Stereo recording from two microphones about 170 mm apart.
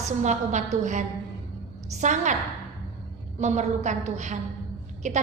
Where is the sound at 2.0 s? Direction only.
45° right (ahead or behind).